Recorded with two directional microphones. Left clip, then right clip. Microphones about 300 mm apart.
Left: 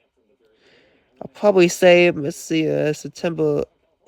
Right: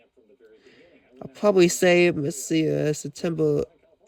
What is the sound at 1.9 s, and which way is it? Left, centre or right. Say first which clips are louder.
Speech: left 5 dB; left.